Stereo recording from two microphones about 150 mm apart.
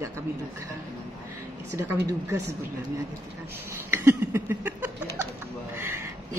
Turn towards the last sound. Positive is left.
turn(degrees=-15)  # may be behind; listen again after turning